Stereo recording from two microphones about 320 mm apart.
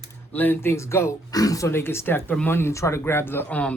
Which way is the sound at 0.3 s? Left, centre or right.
Centre.